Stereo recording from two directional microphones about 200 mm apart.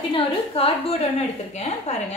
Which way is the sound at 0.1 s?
30° left (ahead or behind).